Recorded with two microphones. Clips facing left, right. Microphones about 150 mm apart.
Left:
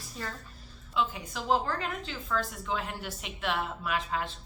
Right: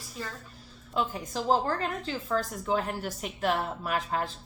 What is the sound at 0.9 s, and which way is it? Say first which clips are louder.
A woman's voice: right 1 dB; 40° right (ahead or behind).